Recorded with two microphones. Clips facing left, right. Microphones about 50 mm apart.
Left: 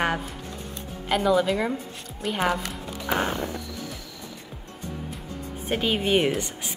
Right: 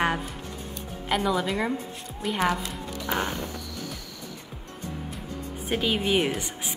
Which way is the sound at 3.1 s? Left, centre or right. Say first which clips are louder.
Left 3 dB; left.